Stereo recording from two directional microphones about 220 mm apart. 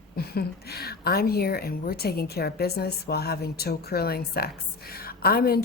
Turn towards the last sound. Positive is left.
turn(degrees=45)  # may be behind; listen again after turning